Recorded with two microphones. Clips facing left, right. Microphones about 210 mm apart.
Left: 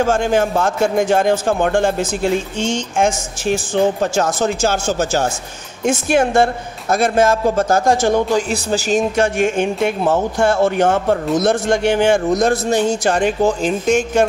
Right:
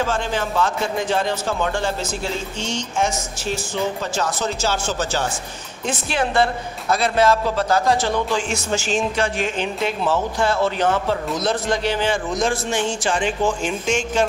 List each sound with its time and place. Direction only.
0.0 s speech: 45° left (ahead or behind)